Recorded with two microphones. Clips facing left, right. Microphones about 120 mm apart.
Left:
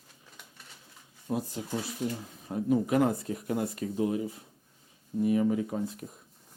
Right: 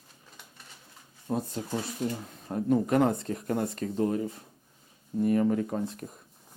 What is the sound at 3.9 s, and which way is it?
Speech, 45° right (ahead or behind).